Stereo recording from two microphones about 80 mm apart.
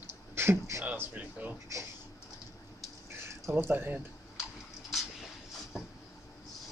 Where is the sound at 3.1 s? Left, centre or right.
Right.